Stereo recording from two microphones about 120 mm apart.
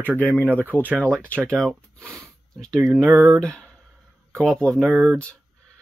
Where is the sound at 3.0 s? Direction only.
25° right (ahead or behind).